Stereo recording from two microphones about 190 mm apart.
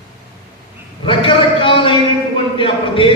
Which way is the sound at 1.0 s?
25° left (ahead or behind).